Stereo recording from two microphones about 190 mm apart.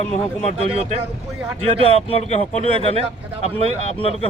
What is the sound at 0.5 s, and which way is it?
Speech, 35° right (ahead or behind).